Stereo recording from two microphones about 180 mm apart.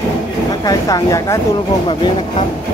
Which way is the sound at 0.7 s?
20° left (ahead or behind).